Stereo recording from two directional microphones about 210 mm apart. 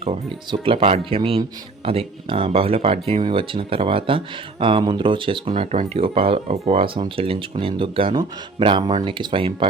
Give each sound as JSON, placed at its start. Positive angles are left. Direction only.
{"t": 0.0, "sound": "speech", "side_deg": -25}